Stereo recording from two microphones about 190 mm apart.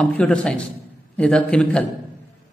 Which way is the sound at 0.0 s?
5° left (ahead or behind).